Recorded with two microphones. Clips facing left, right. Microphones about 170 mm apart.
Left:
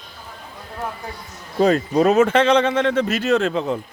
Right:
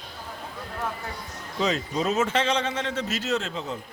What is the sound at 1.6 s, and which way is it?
Speech, 55° left (ahead or behind).